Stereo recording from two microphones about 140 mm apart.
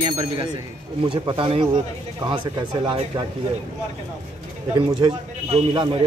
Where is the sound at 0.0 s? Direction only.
30° right (ahead or behind).